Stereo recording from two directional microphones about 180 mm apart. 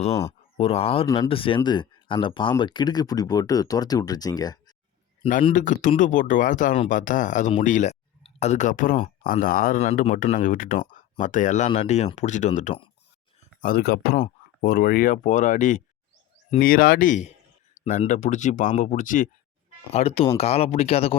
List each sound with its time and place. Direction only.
0.5 s speech: 35° left (ahead or behind)
5.5 s speech: 45° left (ahead or behind)
13.6 s speech: 55° left (ahead or behind)
19.9 s speech: 35° left (ahead or behind)